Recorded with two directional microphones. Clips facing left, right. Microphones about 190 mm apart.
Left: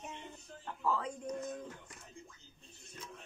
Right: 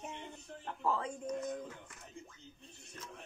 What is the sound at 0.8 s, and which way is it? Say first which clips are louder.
Speech: even; 20° right (ahead or behind).